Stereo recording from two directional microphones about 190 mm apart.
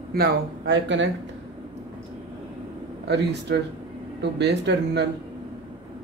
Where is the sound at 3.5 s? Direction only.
60° right (ahead or behind).